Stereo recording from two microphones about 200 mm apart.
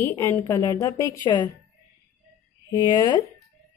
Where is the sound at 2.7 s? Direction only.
20° left (ahead or behind).